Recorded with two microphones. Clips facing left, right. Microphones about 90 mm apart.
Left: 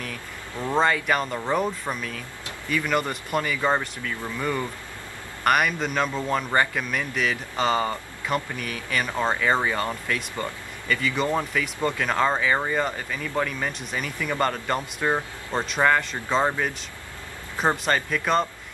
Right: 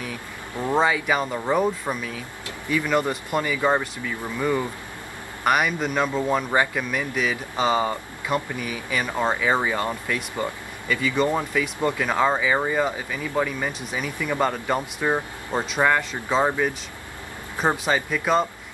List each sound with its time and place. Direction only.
0.7 s speech: 5° right (ahead or behind)